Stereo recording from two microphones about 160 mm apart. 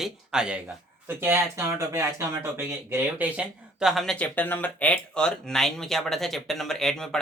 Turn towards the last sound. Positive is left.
turn(degrees=5)  # may be behind; listen again after turning